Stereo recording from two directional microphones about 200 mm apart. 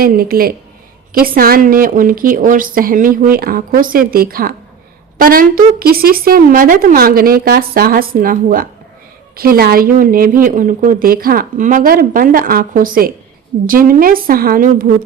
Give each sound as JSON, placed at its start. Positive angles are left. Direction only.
{"t": 0.0, "sound": "a woman's voice", "side_deg": -45}